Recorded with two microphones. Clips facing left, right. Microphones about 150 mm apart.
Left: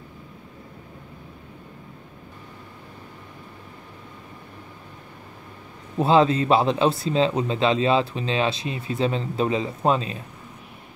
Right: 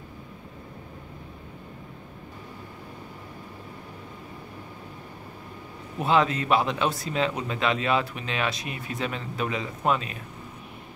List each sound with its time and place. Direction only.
5.9 s speech: 30° left (ahead or behind)